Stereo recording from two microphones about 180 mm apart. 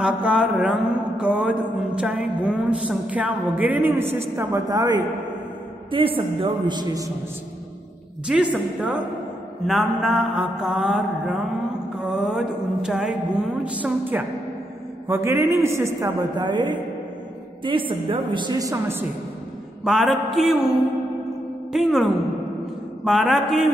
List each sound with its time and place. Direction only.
0.0 s mantra: 5° right (ahead or behind)
1.1 s a sound: 5° right (ahead or behind)
4.4 s a woman's voice: 15° right (ahead or behind)
8.3 s a sound: 5° right (ahead or behind)
9.7 s mantra: centre (ahead or behind)
12.0 s a sound: centre (ahead or behind); by 16.7 s 25° right (ahead or behind)
17.6 s a woman's voice: 30° right (ahead or behind)
19.8 s mantra: centre (ahead or behind)
21.7 s mantra: centre (ahead or behind)